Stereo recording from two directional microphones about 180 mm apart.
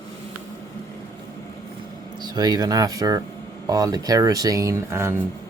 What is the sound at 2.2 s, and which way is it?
Speech, 20° right (ahead or behind).